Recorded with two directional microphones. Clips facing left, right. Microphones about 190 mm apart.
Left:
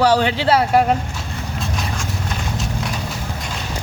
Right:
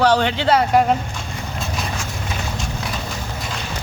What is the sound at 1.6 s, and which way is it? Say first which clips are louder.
Horse: even; 5° right (ahead or behind).